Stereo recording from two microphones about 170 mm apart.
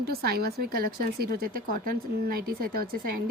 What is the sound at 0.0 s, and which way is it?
Speech, 65° right (ahead or behind).